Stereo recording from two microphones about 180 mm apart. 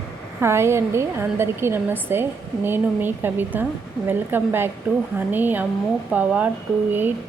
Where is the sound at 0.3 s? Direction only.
15° right (ahead or behind).